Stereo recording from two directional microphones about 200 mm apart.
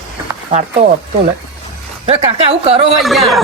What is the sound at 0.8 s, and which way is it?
Speech, 30° right (ahead or behind).